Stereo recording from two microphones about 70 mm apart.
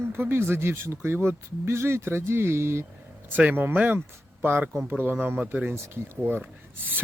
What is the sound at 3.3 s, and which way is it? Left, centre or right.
Speech, right.